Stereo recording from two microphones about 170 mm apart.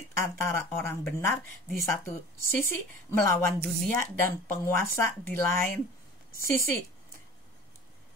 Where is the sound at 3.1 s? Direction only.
15° left (ahead or behind).